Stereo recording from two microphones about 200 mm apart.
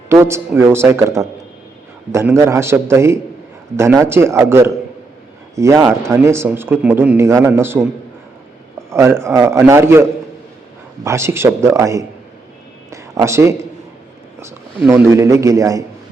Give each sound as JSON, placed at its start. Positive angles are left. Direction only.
{"t": 0.1, "sound": "speech", "side_deg": -15}
{"t": 8.9, "sound": "speech", "side_deg": -15}
{"t": 12.9, "sound": "a sound", "side_deg": -15}
{"t": 14.8, "sound": "speech", "side_deg": -10}